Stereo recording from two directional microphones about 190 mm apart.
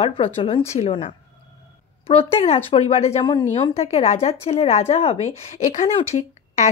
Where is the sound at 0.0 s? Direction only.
30° left (ahead or behind).